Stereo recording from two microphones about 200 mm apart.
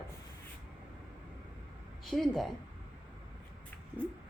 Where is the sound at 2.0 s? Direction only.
Centre (ahead or behind).